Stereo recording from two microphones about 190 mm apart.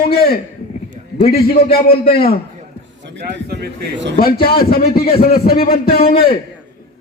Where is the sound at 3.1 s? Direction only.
60° right (ahead or behind).